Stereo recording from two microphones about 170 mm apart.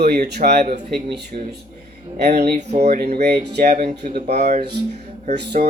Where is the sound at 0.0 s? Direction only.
70° right (ahead or behind).